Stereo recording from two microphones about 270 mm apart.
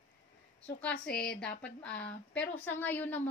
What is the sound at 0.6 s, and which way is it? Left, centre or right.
A woman's voice, centre.